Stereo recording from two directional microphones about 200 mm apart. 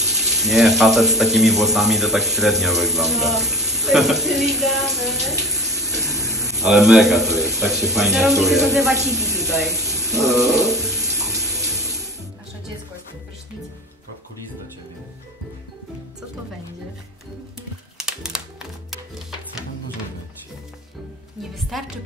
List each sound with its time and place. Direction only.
0.0 s a man's voice: centre (ahead or behind)
9.8 s water tap: centre (ahead or behind)
17.9 s typing: 5° right (ahead or behind)
18.9 s music: centre (ahead or behind)
21.4 s music: centre (ahead or behind)